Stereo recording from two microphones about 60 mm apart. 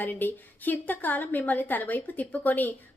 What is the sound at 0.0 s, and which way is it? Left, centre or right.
A woman's voice, left.